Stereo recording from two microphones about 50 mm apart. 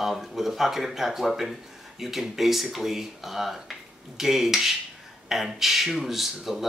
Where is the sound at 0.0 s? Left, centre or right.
Centre.